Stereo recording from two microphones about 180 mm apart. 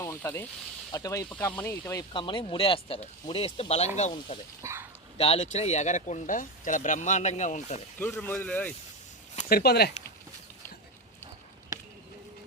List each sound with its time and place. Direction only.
0.0 s speech: 10° left (ahead or behind)
2.1 s speech: 25° left (ahead or behind)
4.6 s speech: 15° right (ahead or behind)
5.1 s speech: 35° left (ahead or behind)
7.9 s speech: 10° left (ahead or behind)
9.5 s speech: 60° left (ahead or behind)